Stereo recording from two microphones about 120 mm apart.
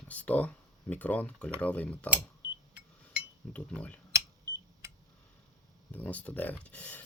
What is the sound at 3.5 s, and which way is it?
Speech, 10° left (ahead or behind).